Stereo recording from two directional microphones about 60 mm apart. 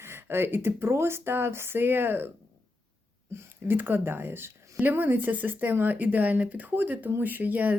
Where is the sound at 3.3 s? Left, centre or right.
Right.